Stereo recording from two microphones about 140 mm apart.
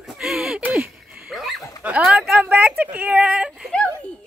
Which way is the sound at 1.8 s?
10° right (ahead or behind).